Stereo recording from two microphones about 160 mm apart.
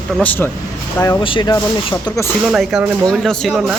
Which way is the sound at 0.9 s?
25° left (ahead or behind).